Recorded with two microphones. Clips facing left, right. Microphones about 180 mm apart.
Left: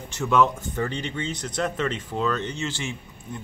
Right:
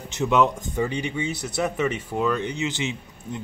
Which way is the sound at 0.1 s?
20° right (ahead or behind).